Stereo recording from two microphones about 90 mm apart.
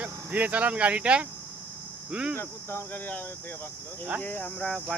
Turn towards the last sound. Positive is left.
turn(degrees=5)  # may be behind; listen again after turning